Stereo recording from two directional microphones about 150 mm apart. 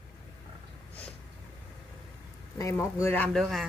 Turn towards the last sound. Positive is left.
turn(degrees=5)  # may be behind; listen again after turning